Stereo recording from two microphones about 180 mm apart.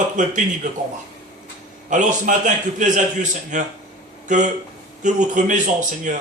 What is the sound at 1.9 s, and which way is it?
Speech, 45° right (ahead or behind).